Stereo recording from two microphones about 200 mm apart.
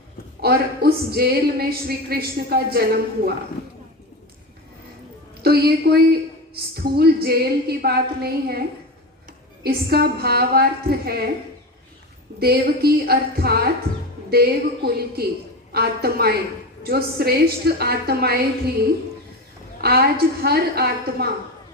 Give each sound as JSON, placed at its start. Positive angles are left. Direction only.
{"t": 0.4, "sound": "speech", "side_deg": -50}
{"t": 5.4, "sound": "speech", "side_deg": -50}
{"t": 9.6, "sound": "speech", "side_deg": -50}
{"t": 12.4, "sound": "speech", "side_deg": -50}
{"t": 13.9, "sound": "music", "side_deg": -30}
{"t": 14.3, "sound": "speech", "side_deg": -50}
{"t": 19.8, "sound": "speech", "side_deg": -50}